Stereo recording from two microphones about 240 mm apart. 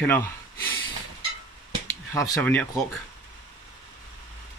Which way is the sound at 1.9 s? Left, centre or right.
Centre.